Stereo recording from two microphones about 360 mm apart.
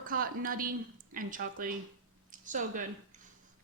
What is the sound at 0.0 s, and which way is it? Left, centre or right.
A woman's voice, right.